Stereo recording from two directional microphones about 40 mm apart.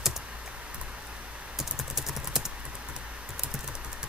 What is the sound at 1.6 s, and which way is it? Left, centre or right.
Typing, centre.